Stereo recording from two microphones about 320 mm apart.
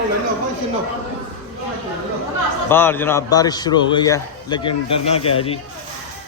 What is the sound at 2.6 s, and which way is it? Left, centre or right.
A man's voice, centre.